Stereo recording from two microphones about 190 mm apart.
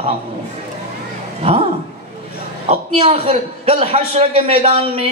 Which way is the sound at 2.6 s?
30° right (ahead or behind).